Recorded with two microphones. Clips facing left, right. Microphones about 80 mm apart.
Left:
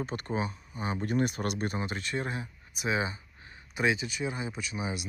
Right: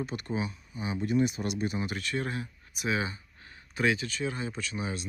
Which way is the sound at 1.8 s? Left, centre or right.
Left.